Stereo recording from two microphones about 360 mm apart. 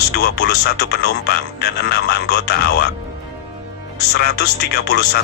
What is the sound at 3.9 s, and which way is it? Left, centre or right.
Speech, left.